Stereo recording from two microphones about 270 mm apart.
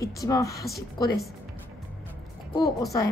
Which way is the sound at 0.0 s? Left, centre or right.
Centre.